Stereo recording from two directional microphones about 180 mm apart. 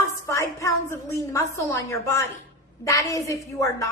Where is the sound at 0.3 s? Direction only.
15° left (ahead or behind).